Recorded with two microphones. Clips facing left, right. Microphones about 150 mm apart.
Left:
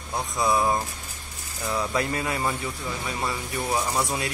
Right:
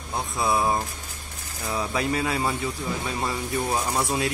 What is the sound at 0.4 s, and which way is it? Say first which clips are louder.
Speech: left 1 dB; 20° right (ahead or behind).